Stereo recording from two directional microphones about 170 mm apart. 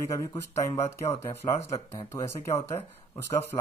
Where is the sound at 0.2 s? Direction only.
15° left (ahead or behind).